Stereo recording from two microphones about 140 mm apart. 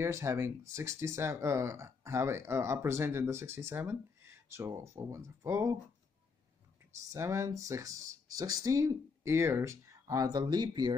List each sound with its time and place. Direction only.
0.0 s speech: 20° right (ahead or behind)
7.1 s speech: 20° right (ahead or behind)